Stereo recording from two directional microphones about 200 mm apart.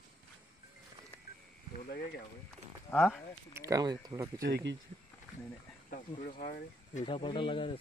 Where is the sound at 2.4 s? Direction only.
5° left (ahead or behind).